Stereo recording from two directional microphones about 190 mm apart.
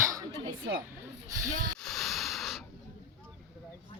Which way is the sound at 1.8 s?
Centre (ahead or behind).